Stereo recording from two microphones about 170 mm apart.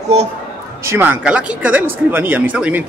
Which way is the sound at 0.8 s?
15° right (ahead or behind).